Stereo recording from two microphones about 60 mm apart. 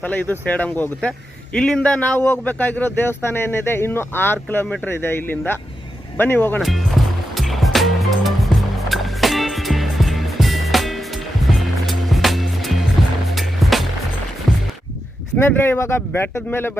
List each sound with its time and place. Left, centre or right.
0.0 s speech: left
1.5 s speech: centre
2.1 s speech: left
6.6 s speech: centre
7.3 s music: centre
13.3 s skateboard: centre
15.4 s speech: left